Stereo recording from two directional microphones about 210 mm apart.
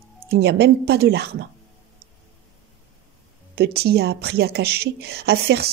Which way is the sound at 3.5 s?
50° right (ahead or behind).